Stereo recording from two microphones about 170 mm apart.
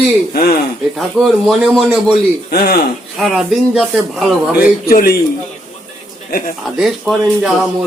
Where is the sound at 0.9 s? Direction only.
Centre (ahead or behind).